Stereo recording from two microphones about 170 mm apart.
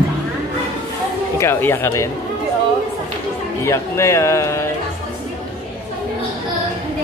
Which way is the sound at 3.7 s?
15° left (ahead or behind).